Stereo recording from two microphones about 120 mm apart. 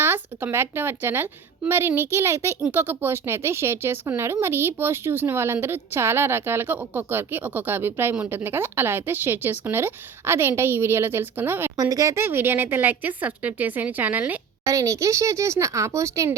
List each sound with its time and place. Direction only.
0.0 s speech: 20° right (ahead or behind)
11.8 s speech: 25° right (ahead or behind)
14.7 s speech: 25° right (ahead or behind)